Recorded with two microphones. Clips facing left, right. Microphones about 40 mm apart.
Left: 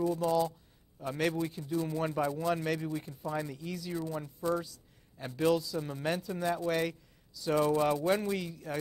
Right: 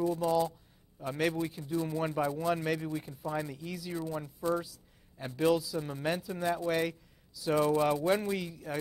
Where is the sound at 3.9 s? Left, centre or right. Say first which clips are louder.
Right 1 dB; right.